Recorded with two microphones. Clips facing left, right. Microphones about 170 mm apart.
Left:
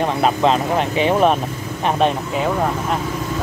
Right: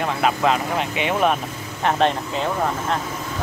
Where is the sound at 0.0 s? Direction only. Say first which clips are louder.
Left 3 dB; 30° left (ahead or behind).